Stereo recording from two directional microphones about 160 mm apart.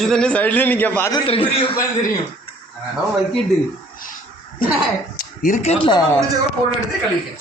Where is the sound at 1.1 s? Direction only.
35° left (ahead or behind).